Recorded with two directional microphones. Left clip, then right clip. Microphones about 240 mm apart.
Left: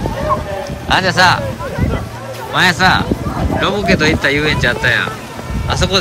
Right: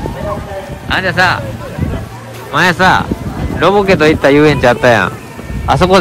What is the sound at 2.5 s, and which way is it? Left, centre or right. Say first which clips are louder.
Speech: right 2 dB; centre.